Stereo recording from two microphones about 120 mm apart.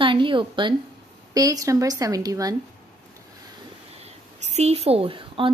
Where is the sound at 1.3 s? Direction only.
30° right (ahead or behind).